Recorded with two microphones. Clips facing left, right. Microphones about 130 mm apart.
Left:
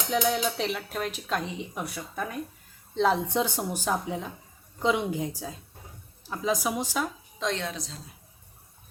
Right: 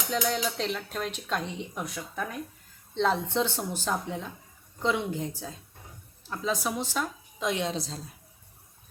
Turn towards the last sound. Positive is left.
turn(degrees=-30)  # may be behind; listen again after turning